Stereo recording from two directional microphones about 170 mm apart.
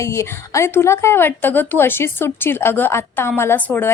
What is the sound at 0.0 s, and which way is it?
A woman's voice, 15° left (ahead or behind).